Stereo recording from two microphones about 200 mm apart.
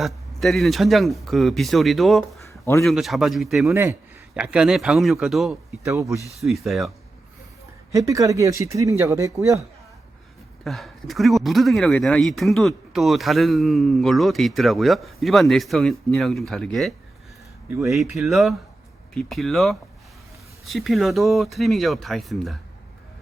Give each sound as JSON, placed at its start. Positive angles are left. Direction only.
{"t": 0.0, "sound": "speech", "side_deg": 0}
{"t": 2.4, "sound": "a sound", "side_deg": 15}
{"t": 2.8, "sound": "speech", "side_deg": 0}
{"t": 5.8, "sound": "speech", "side_deg": -15}
{"t": 6.4, "sound": "speech", "side_deg": 0}
{"t": 7.9, "sound": "speech", "side_deg": -15}
{"t": 10.6, "sound": "speech", "side_deg": 0}
{"t": 18.2, "sound": "speech", "side_deg": 0}